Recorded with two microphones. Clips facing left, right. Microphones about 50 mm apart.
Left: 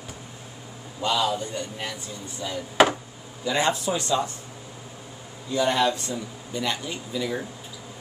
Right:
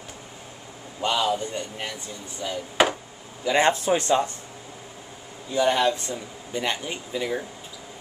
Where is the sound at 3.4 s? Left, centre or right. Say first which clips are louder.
Right 3 dB; right.